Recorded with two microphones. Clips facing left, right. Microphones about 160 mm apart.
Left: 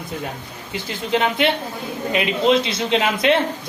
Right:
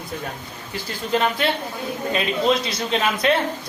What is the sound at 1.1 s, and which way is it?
A man's voice, 20° left (ahead or behind).